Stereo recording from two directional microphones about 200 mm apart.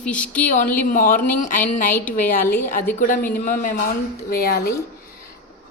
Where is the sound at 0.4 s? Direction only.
40° left (ahead or behind).